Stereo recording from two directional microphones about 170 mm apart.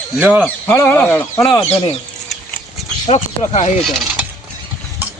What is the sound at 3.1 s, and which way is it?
Speech, 40° left (ahead or behind).